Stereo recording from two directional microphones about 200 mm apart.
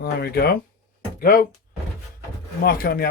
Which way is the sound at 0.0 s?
50° left (ahead or behind).